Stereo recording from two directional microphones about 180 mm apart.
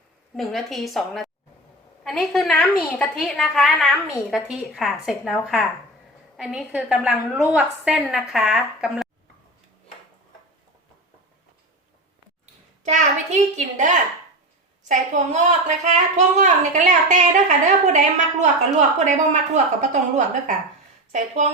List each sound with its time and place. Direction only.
0.3 s a woman's voice: centre (ahead or behind)
12.8 s a woman's voice: 40° right (ahead or behind)